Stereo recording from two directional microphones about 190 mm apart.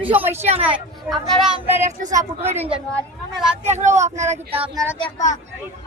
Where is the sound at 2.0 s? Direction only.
40° right (ahead or behind).